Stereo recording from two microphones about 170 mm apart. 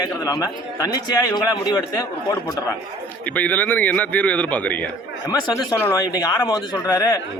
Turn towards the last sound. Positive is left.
turn(degrees=20)  # may be behind; listen again after turning